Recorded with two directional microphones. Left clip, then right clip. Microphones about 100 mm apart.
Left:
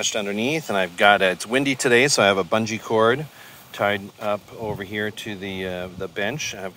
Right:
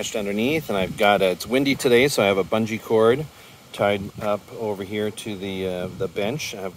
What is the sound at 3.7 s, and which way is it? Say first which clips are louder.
Speech: right 1 dB; 35° right (ahead or behind).